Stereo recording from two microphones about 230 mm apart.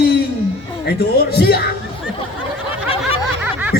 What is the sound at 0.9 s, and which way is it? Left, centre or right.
Speech, left.